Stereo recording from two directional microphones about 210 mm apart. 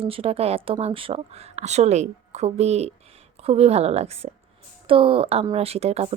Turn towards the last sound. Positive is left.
turn(degrees=-30)  # may be behind; listen again after turning